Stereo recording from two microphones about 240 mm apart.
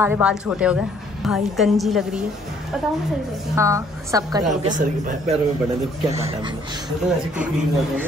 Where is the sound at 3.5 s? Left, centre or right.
Centre.